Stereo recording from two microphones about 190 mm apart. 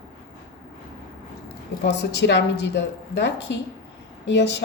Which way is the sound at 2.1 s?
65° left (ahead or behind).